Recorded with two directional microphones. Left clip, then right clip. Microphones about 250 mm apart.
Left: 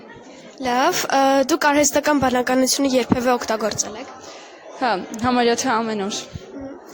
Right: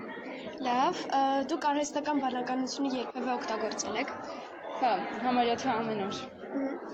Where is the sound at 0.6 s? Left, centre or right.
Left.